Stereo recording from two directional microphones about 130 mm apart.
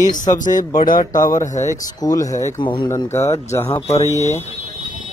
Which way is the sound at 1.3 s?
70° left (ahead or behind).